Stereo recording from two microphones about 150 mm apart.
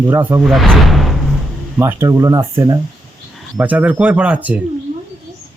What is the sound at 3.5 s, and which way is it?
Speech, 10° right (ahead or behind).